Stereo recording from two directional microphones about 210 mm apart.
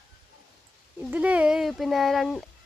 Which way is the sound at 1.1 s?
5° right (ahead or behind).